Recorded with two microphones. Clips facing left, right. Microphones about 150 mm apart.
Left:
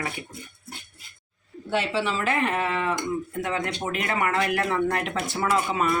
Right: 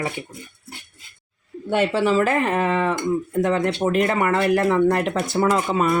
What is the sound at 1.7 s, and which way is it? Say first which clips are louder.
Speech: right 7 dB; 50° right (ahead or behind).